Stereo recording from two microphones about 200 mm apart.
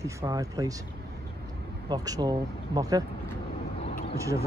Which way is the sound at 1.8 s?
20° right (ahead or behind).